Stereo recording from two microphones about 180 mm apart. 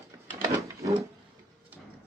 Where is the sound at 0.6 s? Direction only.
15° right (ahead or behind).